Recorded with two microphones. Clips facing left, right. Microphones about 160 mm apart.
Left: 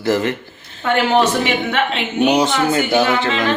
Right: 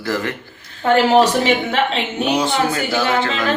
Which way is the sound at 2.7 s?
20° left (ahead or behind).